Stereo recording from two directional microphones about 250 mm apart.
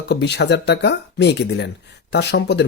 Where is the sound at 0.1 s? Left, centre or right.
Left.